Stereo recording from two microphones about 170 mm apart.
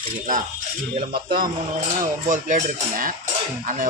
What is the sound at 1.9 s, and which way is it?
Speech, 50° right (ahead or behind).